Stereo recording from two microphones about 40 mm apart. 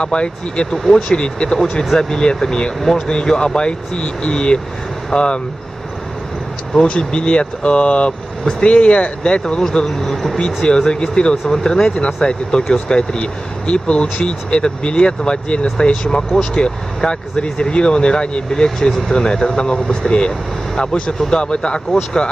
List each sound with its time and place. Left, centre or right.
0.0 s speech: left
0.8 s speech: centre
1.1 s speech: left
1.6 s speech: centre
6.7 s speech: left
9.8 s speech: centre
10.3 s speech: left